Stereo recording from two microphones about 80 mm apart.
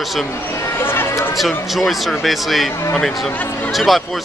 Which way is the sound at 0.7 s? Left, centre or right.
Left.